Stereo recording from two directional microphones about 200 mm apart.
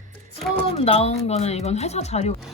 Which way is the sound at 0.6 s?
30° left (ahead or behind).